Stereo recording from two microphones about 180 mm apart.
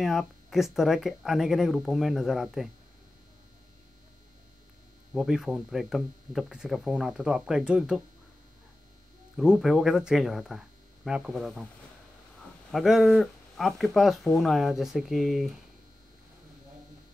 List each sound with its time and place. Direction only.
0.0 s speech: centre (ahead or behind)
5.1 s speech: centre (ahead or behind)
9.4 s speech: 5° right (ahead or behind)
12.7 s speech: centre (ahead or behind)